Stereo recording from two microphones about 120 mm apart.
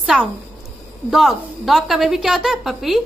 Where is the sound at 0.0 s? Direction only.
10° right (ahead or behind).